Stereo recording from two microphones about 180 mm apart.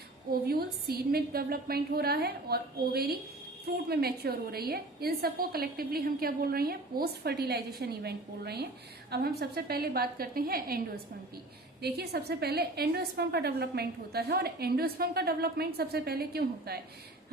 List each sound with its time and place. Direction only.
0.4 s a woman's voice: 60° right (ahead or behind)
11.8 s a woman's voice: 60° right (ahead or behind)